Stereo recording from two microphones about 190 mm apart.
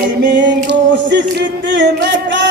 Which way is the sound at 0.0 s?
70° right (ahead or behind).